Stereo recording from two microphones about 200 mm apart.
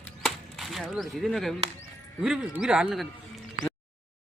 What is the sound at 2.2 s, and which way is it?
Speech, 5° right (ahead or behind).